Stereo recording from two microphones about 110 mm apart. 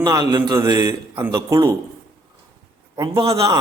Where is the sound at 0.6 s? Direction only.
30° right (ahead or behind).